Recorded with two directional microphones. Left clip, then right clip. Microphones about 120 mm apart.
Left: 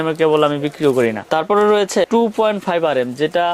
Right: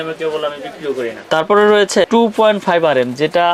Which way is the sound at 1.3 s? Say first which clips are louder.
Right 5 dB; 40° left (ahead or behind).